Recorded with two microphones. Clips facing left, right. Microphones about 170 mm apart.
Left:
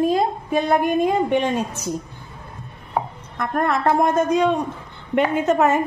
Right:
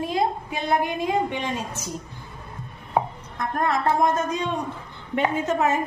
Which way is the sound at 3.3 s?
60° left (ahead or behind).